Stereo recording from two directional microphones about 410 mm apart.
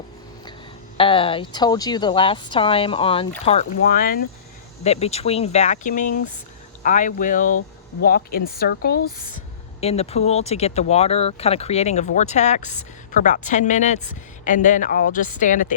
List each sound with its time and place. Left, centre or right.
0.9 s speech: centre